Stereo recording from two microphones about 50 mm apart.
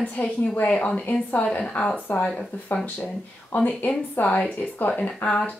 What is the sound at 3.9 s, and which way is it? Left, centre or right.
A woman's voice, left.